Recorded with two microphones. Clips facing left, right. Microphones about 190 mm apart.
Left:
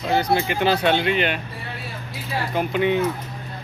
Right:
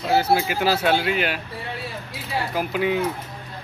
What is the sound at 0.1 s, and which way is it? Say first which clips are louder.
Speech: right 1 dB; 5° right (ahead or behind).